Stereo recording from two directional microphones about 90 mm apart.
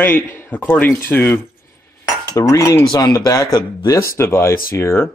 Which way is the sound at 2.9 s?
40° left (ahead or behind).